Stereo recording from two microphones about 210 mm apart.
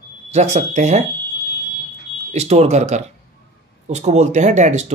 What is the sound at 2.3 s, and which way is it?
Speech, 30° right (ahead or behind).